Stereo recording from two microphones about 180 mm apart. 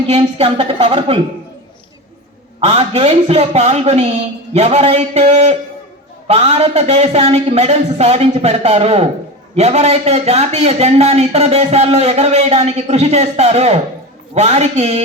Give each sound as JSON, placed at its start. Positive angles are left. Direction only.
{"t": 0.1, "sound": "speech", "side_deg": -30}
{"t": 2.6, "sound": "speech", "side_deg": -35}